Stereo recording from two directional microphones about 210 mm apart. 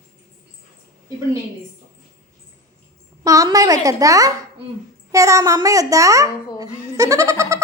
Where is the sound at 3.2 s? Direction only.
15° right (ahead or behind).